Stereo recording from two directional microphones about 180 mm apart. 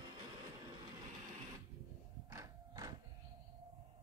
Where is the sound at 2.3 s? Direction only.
20° right (ahead or behind).